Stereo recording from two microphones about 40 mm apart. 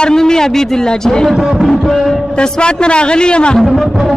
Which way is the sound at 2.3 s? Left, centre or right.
Left.